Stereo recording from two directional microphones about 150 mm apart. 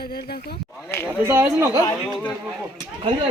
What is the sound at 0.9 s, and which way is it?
Speech, 15° left (ahead or behind).